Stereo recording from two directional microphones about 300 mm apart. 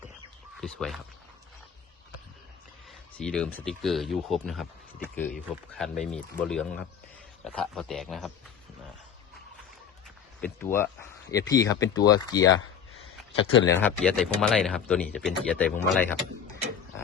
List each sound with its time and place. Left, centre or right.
0.5 s speech: centre
3.2 s speech: centre
10.4 s speech: centre
13.7 s speech: centre